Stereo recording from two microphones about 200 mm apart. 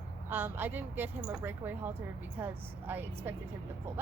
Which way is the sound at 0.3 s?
10° right (ahead or behind).